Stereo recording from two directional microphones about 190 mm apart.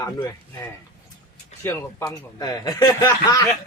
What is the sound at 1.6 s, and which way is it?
A man's voice, 15° left (ahead or behind).